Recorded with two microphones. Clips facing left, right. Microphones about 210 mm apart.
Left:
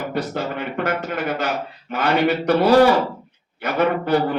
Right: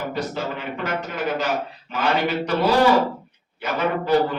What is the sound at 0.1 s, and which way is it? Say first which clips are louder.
A man's voice: left 2 dB; 55° left (ahead or behind).